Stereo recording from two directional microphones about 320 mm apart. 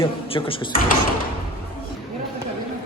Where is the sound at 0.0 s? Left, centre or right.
Centre.